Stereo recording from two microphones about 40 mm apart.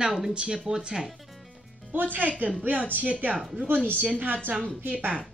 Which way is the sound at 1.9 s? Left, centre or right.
Right.